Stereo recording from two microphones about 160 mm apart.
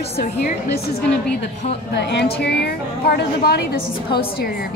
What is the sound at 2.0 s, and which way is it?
A woman's voice, 90° left.